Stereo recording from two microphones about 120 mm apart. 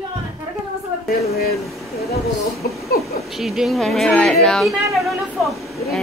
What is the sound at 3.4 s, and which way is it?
Speech, centre (ahead or behind).